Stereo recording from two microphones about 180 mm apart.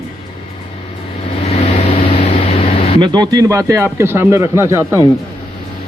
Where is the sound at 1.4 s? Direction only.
40° left (ahead or behind).